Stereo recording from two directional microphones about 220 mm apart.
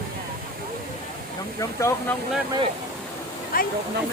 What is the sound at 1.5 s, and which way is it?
Speech, 15° left (ahead or behind).